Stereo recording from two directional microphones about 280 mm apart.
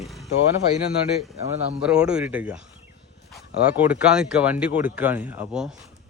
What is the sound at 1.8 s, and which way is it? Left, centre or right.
Speech, centre.